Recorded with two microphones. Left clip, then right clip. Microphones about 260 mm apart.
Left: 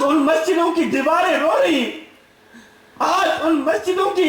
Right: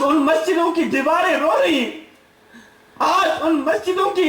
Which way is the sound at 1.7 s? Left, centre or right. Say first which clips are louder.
Even; right.